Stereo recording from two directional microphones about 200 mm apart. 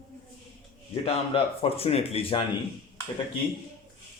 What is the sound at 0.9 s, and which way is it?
A man's voice, 30° left (ahead or behind).